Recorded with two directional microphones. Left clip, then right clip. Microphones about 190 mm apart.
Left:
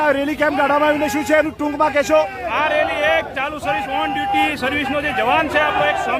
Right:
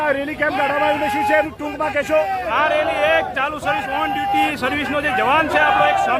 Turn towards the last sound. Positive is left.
turn(degrees=0)  # may be behind; listen again after turning